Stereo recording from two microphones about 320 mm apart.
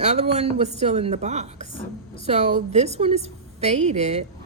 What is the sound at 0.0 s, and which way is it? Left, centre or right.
A woman's voice, centre.